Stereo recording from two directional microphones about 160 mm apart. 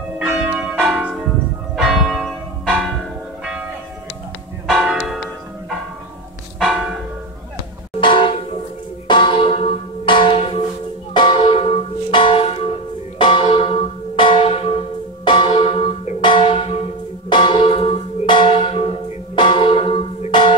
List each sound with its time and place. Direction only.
0.2 s church bell: 5° right (ahead or behind)
4.6 s church bell: centre (ahead or behind)
6.6 s church bell: centre (ahead or behind)
8.0 s a sound: 30° left (ahead or behind)
9.0 s church bell: 30° left (ahead or behind)
10.0 s music: 30° left (ahead or behind)
12.1 s church bell: 30° left (ahead or behind)